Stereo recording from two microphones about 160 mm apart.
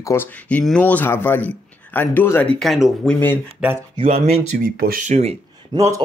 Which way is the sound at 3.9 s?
40° right (ahead or behind).